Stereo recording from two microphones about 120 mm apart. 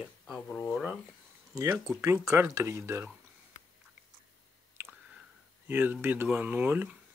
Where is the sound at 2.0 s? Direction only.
25° right (ahead or behind).